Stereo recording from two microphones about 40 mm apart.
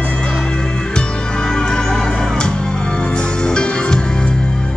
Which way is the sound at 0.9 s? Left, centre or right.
Centre.